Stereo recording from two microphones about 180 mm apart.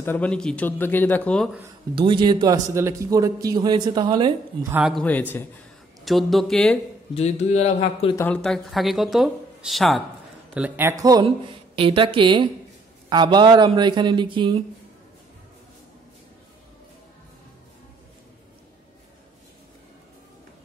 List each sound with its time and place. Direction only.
0.0 s a man's voice: 10° left (ahead or behind)
2.0 s a man's voice: 25° right (ahead or behind)
4.7 s speech: 5° right (ahead or behind)
6.0 s speech: centre (ahead or behind)
7.2 s a man's voice: 40° left (ahead or behind)
8.2 s a man's voice: 5° left (ahead or behind); by 11.2 s 20° right (ahead or behind)
11.2 s a man's voice: 30° right (ahead or behind)